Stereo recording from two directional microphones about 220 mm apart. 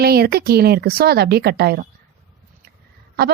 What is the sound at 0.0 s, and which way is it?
A woman's voice, 45° right (ahead or behind).